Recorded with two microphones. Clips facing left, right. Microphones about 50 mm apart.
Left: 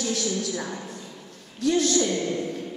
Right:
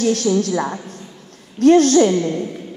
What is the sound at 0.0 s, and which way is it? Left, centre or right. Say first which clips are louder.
A woman's voice: right 10 dB; right.